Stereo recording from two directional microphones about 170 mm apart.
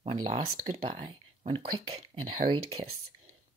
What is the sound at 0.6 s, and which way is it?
Speech, 35° right (ahead or behind).